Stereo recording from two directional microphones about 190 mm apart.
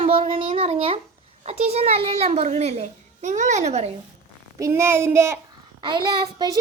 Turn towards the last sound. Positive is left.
turn(degrees=-25)  # may be behind; listen again after turning